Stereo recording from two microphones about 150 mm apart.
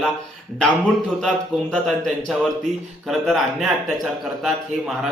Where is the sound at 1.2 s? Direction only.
Centre (ahead or behind).